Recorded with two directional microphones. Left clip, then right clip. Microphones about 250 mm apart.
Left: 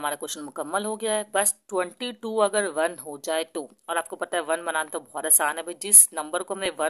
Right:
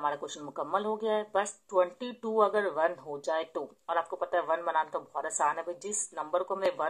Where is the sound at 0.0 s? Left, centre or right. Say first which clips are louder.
Left 3 dB; left.